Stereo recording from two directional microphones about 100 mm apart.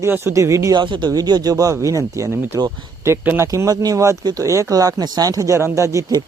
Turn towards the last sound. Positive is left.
turn(degrees=-30)  # may be behind; listen again after turning